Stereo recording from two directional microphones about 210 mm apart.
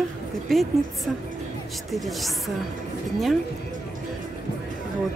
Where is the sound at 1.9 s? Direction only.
Centre (ahead or behind).